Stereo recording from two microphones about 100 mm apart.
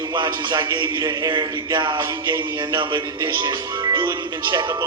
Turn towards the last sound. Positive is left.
turn(degrees=-50)  # may be behind; listen again after turning